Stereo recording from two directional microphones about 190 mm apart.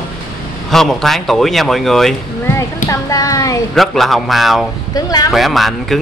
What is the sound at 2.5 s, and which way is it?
Speech, 15° left (ahead or behind).